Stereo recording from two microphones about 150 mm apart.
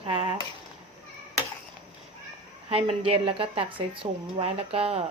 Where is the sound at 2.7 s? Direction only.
40° right (ahead or behind).